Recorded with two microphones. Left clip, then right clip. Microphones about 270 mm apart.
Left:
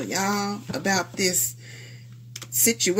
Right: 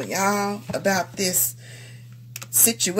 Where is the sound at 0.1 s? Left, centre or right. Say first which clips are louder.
Right 4 dB; right.